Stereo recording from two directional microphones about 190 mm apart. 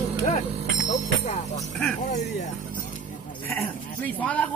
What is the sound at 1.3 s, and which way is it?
Music, 35° left (ahead or behind).